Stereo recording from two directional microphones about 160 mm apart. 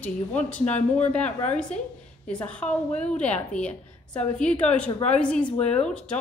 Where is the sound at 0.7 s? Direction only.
45° left (ahead or behind).